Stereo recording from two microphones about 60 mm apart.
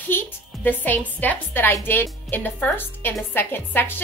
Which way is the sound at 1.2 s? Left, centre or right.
Left.